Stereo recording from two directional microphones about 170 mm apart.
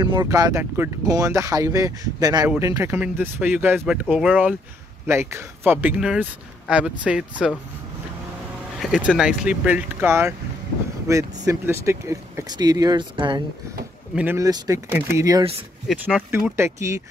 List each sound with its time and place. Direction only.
0.0 s speech: 25° right (ahead or behind); by 7.5 s 5° right (ahead or behind)
8.8 s speech: 5° right (ahead or behind); by 13.4 s 25° right (ahead or behind)
14.1 s speech: 15° right (ahead or behind)
15.9 s speech: centre (ahead or behind)
16.3 s speech: 15° right (ahead or behind)